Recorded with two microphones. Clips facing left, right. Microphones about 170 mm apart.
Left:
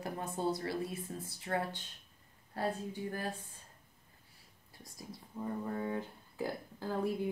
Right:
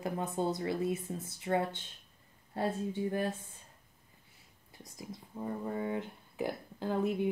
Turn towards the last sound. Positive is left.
turn(degrees=-20)  # may be behind; listen again after turning